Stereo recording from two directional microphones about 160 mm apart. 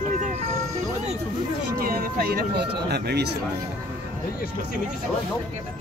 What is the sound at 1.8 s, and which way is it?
Speech, 65° right (ahead or behind).